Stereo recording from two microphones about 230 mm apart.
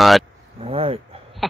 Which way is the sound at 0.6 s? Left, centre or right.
Right.